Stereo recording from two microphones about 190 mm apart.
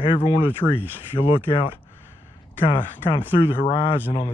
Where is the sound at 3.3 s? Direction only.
30° left (ahead or behind).